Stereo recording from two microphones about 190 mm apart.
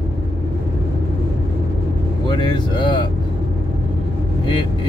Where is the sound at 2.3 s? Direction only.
25° left (ahead or behind).